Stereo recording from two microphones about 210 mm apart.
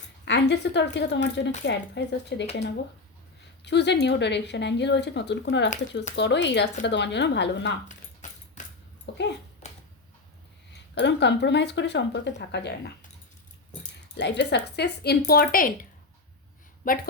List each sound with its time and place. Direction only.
0.3 s speech: 55° left (ahead or behind)
3.6 s speech: 55° left (ahead or behind)
7.9 s dog: 35° left (ahead or behind)
9.1 s dog: 60° left (ahead or behind)
9.6 s a sound: 35° left (ahead or behind)
10.7 s speech: 55° left (ahead or behind)
14.2 s speech: 55° left (ahead or behind)